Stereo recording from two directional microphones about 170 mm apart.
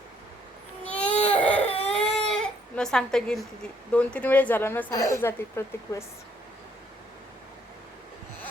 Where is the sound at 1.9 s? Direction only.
5° left (ahead or behind).